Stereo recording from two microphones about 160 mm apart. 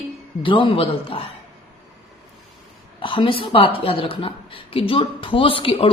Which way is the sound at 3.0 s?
30° left (ahead or behind).